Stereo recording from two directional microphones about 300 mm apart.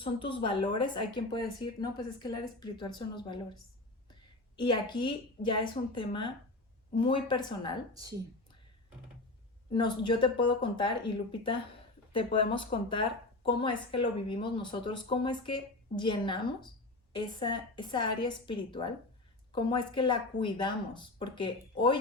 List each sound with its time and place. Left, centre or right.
0.0 s a woman's voice: centre
9.7 s a woman's voice: centre
12.1 s a woman's voice: centre